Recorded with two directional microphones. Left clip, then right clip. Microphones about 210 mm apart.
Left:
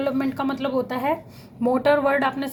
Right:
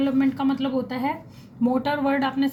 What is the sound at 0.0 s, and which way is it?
Speech, 30° left (ahead or behind).